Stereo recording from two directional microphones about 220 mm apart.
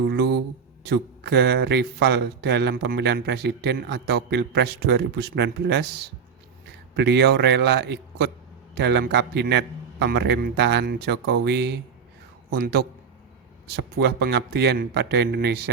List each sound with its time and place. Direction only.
0.1 s a man's voice: 50° right (ahead or behind)